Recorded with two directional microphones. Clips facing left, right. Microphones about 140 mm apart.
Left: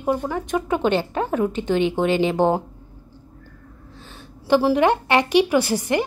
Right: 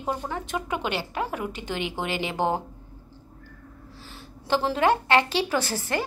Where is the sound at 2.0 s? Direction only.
20° left (ahead or behind).